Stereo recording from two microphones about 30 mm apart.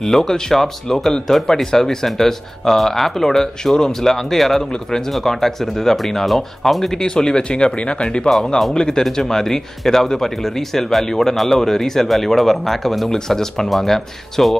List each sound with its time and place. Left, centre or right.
0.0 s speech: centre
7.0 s speech: left; by 13.1 s centre
13.1 s speech: centre
13.7 s speech: centre